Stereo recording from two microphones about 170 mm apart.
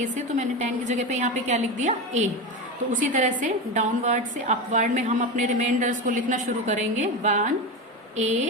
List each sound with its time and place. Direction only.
0.0 s a woman's voice: 45° right (ahead or behind)